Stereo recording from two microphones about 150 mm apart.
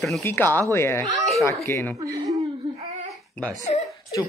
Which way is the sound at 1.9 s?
25° right (ahead or behind).